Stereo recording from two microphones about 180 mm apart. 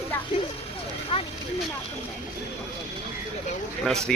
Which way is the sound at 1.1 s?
30° left (ahead or behind).